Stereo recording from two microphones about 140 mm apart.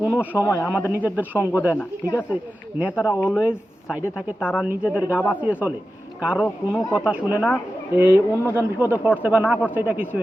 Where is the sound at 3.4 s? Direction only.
5° right (ahead or behind).